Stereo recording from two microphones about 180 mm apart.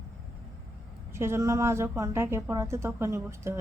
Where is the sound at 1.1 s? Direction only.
15° right (ahead or behind).